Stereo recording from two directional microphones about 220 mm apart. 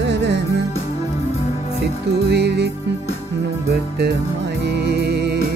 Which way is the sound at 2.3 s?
50° right (ahead or behind).